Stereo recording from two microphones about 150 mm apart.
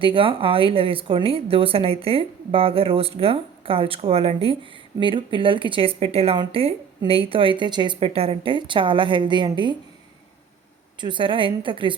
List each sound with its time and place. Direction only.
0.0 s speech: 35° right (ahead or behind)
11.0 s speech: 35° right (ahead or behind)